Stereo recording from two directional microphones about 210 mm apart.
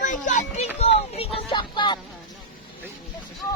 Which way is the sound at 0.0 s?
35° left (ahead or behind).